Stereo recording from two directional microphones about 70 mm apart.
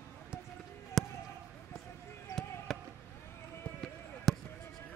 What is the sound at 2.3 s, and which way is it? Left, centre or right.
Basketball bounce, left.